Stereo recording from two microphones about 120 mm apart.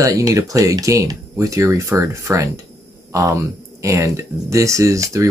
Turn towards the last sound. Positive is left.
turn(degrees=-25)  # may be behind; listen again after turning